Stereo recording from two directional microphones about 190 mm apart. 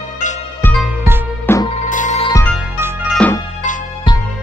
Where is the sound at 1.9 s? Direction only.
40° left (ahead or behind).